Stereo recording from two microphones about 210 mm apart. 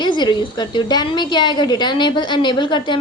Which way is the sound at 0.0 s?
20° left (ahead or behind).